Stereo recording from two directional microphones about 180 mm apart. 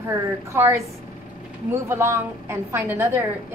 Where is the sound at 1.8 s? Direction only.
15° right (ahead or behind).